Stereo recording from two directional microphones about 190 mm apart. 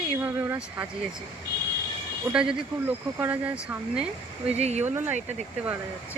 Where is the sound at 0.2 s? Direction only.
10° right (ahead or behind).